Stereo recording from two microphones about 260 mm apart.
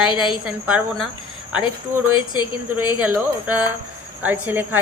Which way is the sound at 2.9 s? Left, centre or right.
Centre.